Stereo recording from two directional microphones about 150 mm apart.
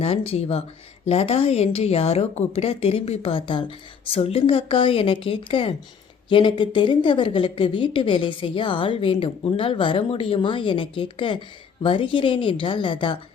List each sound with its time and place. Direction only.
0.3 s a woman's voice: 40° left (ahead or behind)